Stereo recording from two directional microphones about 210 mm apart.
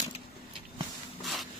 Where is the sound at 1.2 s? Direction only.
Centre (ahead or behind).